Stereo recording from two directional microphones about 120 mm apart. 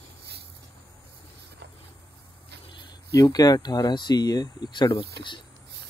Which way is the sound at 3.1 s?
30° left (ahead or behind).